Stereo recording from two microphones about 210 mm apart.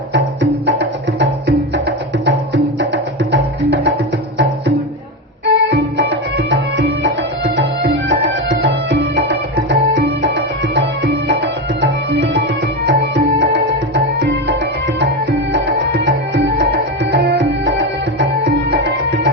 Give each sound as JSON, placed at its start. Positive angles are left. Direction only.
{"t": 0.6, "sound": "music", "side_deg": -60}
{"t": 5.5, "sound": "music", "side_deg": -55}
{"t": 12.8, "sound": "music", "side_deg": -55}